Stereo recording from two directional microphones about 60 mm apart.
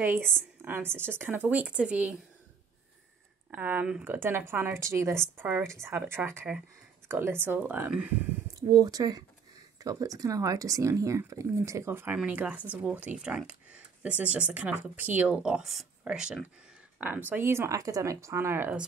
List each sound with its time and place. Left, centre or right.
0.0 s speech: right
3.5 s speech: right
4.7 s speech: right
8.6 s speech: right
9.8 s speech: right
12.3 s speech: right
17.0 s speech: right
17.4 s speech: right
17.7 s speech: right